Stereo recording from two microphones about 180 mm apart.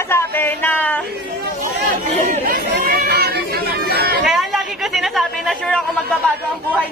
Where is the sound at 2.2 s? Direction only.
50° right (ahead or behind).